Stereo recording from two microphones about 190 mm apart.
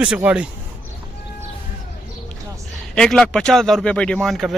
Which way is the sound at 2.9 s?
5° left (ahead or behind).